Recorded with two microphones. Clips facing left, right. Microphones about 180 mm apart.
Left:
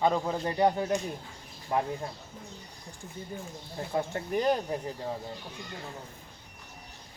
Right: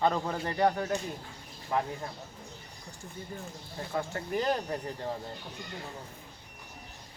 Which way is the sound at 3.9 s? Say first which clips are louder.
Left 2 dB; 20° left (ahead or behind).